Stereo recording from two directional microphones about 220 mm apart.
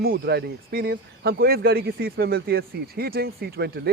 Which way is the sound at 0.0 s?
45° right (ahead or behind).